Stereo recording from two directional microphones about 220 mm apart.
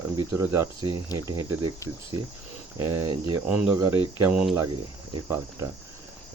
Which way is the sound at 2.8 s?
10° right (ahead or behind).